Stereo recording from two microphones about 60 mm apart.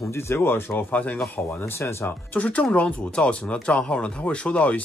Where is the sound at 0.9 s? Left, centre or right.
Left.